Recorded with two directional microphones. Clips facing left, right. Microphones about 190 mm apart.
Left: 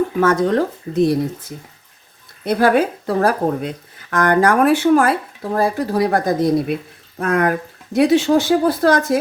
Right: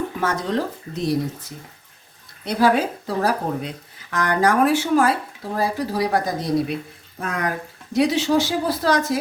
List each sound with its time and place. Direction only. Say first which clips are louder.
0.2 s speech: left 8 dB; 50° left (ahead or behind)
2.4 s speech: left 4 dB; 55° left (ahead or behind)